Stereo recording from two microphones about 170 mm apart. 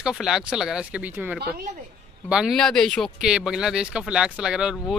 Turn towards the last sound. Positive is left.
turn(degrees=-5)  # may be behind; listen again after turning